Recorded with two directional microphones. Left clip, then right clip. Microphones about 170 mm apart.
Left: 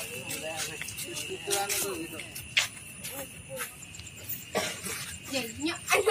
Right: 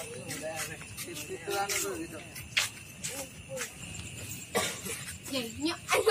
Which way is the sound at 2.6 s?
60° right (ahead or behind).